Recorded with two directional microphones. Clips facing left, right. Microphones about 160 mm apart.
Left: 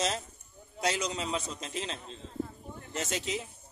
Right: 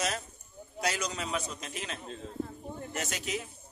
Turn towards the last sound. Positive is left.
turn(degrees=25)  # may be behind; listen again after turning